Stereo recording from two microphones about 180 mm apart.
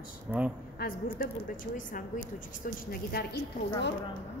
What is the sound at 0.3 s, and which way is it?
Speech, 5° right (ahead or behind).